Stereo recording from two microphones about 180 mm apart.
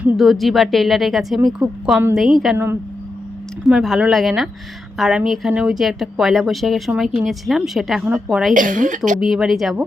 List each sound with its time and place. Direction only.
0.0 s speech: centre (ahead or behind)
3.7 s speech: 5° right (ahead or behind)
8.5 s a woman's voice: 45° right (ahead or behind)
9.2 s speech: centre (ahead or behind)